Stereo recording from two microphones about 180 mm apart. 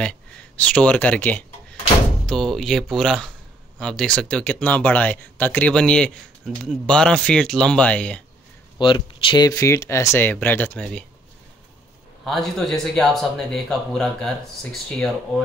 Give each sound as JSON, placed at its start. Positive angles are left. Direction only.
{"t": 0.0, "sound": "speech", "side_deg": 5}
{"t": 8.7, "sound": "speech", "side_deg": 25}
{"t": 12.3, "sound": "speech", "side_deg": 0}